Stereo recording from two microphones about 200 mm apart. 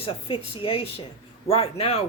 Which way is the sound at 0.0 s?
30° left (ahead or behind).